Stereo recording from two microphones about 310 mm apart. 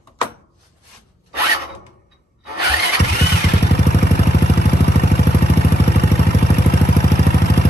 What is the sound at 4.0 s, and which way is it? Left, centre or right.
Vehicle, left.